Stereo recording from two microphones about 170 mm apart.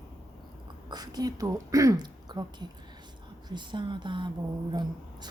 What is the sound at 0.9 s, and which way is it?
A woman's voice, 25° right (ahead or behind).